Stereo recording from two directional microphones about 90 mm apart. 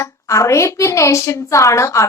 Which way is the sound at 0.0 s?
35° left (ahead or behind).